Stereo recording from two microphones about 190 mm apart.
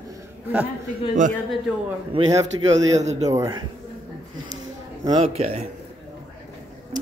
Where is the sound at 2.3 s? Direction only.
15° right (ahead or behind).